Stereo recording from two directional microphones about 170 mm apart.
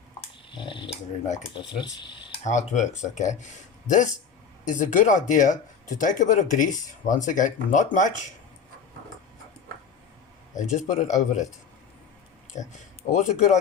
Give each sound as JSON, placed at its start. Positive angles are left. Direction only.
{"t": 0.2, "sound": "a sound", "side_deg": 30}
{"t": 1.5, "sound": "speech", "side_deg": 25}
{"t": 2.4, "sound": "speech", "side_deg": 45}
{"t": 10.6, "sound": "speech", "side_deg": 45}
{"t": 12.5, "sound": "speech", "side_deg": 45}